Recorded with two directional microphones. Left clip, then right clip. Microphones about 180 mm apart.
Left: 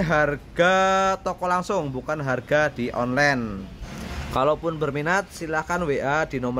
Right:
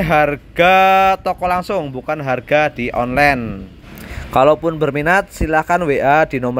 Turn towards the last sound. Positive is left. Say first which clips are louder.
# right 11 dB
turn(degrees=-30)  # may be behind; listen again after turning